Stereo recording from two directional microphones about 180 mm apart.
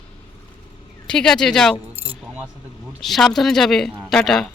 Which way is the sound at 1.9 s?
30° right (ahead or behind).